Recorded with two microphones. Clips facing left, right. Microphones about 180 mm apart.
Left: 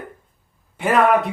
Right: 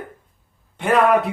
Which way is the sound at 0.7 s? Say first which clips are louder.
Even; centre (ahead or behind).